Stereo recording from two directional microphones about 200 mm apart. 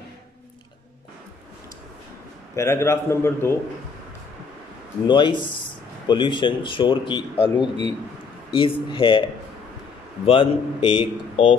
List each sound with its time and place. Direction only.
2.5 s a man's voice: 15° left (ahead or behind)
5.0 s speech: 25° left (ahead or behind)
10.2 s speech: 30° left (ahead or behind)